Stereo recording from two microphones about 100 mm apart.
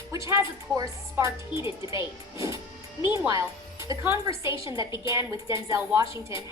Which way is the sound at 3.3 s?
35° right (ahead or behind).